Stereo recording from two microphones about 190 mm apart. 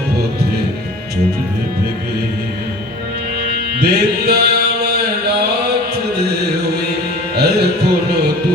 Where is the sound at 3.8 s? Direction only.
60° right (ahead or behind).